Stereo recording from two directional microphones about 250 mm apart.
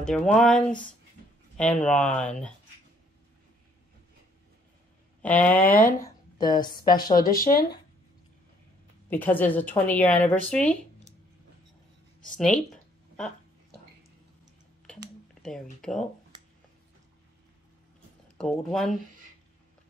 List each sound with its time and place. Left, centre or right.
0.0 s speech: centre
5.2 s speech: centre
7.2 s speech: left
9.1 s speech: centre
12.7 s a sound: centre
15.4 s speech: centre
16.3 s a sound: centre
18.4 s speech: centre